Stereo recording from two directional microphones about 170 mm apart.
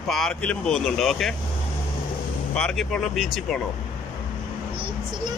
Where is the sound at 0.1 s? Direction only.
5° left (ahead or behind).